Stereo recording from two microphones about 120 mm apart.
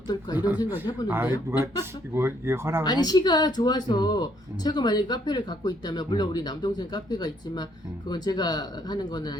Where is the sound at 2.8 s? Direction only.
35° left (ahead or behind).